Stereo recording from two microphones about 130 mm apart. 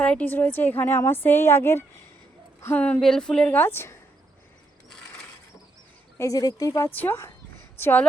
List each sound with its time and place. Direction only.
0.0 s a woman's voice: 10° left (ahead or behind)
6.1 s a woman's voice: 25° left (ahead or behind)